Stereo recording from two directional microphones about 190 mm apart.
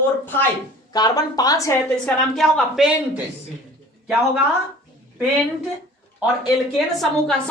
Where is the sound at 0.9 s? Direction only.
20° left (ahead or behind).